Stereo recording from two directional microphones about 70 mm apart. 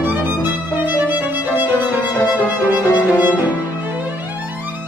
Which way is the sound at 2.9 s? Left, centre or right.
Right.